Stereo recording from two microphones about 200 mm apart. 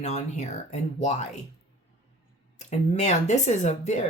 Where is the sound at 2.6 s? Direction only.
35° left (ahead or behind).